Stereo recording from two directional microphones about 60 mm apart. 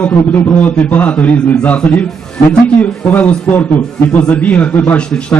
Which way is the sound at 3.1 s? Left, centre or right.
Left.